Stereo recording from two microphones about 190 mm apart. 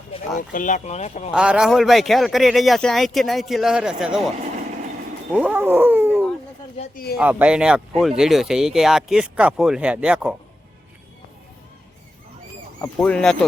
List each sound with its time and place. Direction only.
0.5 s speech: 40° left (ahead or behind)
1.3 s speech: 5° right (ahead or behind)
5.3 s speech: 10° right (ahead or behind)
6.9 s speech: 55° left (ahead or behind)
7.2 s speech: 10° right (ahead or behind)
12.8 s speech: 5° left (ahead or behind)